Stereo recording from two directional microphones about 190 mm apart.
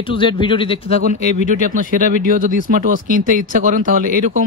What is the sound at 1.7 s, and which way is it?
Speech, 45° right (ahead or behind).